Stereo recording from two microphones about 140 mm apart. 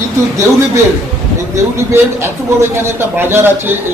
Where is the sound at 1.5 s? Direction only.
20° right (ahead or behind).